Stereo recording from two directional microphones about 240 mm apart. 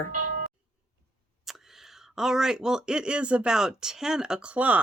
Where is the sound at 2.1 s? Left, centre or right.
Centre.